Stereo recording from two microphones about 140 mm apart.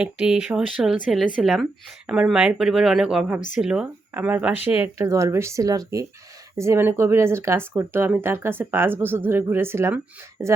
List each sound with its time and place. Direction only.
0.0 s speech: 5° right (ahead or behind)
4.9 s speech: 20° right (ahead or behind)